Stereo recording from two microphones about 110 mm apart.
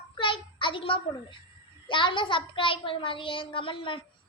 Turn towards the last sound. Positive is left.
turn(degrees=50)  # may be behind; listen again after turning